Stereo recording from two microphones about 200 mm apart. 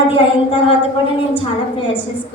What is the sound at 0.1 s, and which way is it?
A woman's voice, 25° left (ahead or behind).